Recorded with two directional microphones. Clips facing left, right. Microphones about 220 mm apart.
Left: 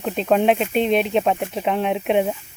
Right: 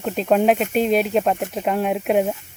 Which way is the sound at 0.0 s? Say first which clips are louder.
Even; centre (ahead or behind).